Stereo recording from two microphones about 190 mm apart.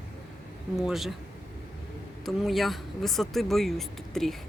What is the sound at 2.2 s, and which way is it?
Speech, centre (ahead or behind).